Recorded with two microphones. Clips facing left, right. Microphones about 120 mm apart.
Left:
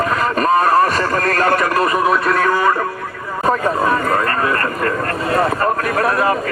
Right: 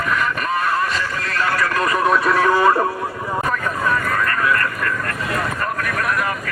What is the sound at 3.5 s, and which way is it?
Speech, 35° left (ahead or behind).